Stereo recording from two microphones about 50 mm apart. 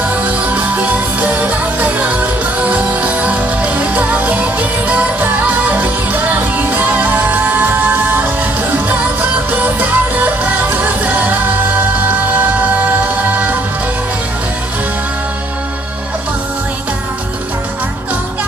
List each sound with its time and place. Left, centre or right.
0.2 s music: right